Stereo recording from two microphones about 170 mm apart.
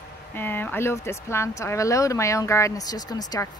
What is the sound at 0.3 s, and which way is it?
Speech, 10° left (ahead or behind).